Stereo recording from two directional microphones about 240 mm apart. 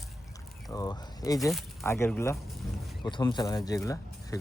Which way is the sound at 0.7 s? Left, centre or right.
Centre.